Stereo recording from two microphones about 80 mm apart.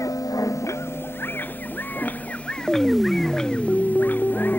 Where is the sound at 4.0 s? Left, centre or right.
Left.